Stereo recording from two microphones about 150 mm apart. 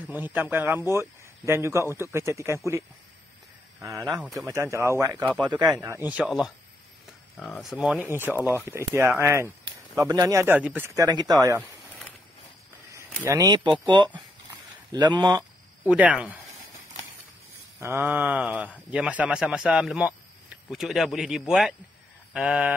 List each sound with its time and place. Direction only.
0.1 s speech: 15° right (ahead or behind)
3.8 s speech: 20° right (ahead or behind)
4.2 s a man's voice: centre (ahead or behind)
4.5 s speech: 20° right (ahead or behind)
5.2 s a man's voice: centre (ahead or behind)
5.8 s speech: 15° right (ahead or behind)
10.4 s speech: 10° right (ahead or behind)
11.0 s speech: 25° right (ahead or behind)
13.2 s speech: 20° right (ahead or behind)
15.8 s speech: 10° right (ahead or behind)
17.7 s a man's voice: 15° right (ahead or behind)